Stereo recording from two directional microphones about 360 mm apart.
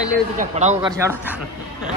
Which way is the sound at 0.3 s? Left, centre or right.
Centre.